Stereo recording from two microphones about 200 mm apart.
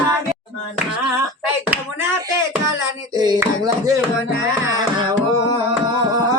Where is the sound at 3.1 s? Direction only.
20° right (ahead or behind).